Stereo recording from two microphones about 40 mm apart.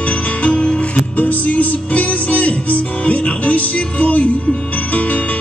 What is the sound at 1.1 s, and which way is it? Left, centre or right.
Music, left.